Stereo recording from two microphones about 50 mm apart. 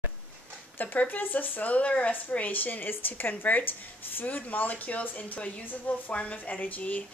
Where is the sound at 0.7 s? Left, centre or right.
Left.